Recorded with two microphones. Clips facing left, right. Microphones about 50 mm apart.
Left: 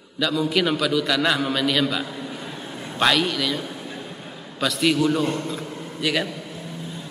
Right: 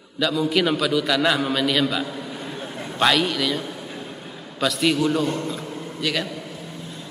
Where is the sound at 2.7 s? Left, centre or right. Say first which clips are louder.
Right 2 dB; centre.